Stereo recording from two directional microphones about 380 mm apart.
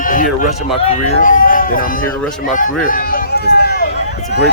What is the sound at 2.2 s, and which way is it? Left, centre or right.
Speech, centre.